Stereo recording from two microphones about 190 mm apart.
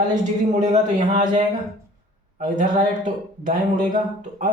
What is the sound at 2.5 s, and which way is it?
Speech, 40° right (ahead or behind).